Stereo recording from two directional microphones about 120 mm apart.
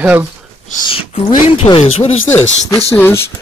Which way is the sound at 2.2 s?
20° left (ahead or behind).